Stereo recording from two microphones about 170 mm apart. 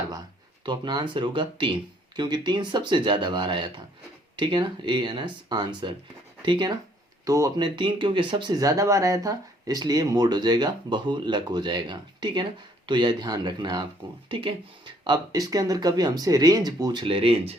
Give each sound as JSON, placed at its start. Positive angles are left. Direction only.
{"t": 0.6, "sound": "speech", "side_deg": -25}